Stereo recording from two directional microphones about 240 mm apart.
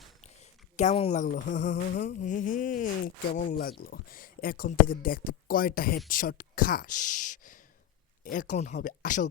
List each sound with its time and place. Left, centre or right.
0.8 s speech: left